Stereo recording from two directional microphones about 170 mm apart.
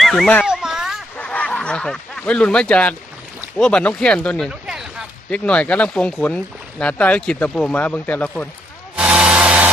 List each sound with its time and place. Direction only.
0.0 s speech: centre (ahead or behind)
0.4 s a sound: 5° right (ahead or behind)
1.1 s snicker: 5° left (ahead or behind)
3.6 s speech: 5° left (ahead or behind)
5.3 s speech: 5° left (ahead or behind)
9.0 s a sound: 5° right (ahead or behind)